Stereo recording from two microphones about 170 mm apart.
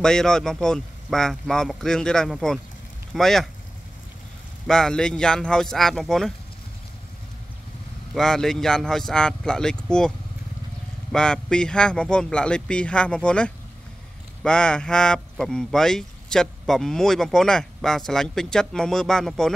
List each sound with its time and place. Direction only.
0.0 s speech: 5° left (ahead or behind)
4.6 s speech: 5° left (ahead or behind)
8.1 s speech: 5° left (ahead or behind)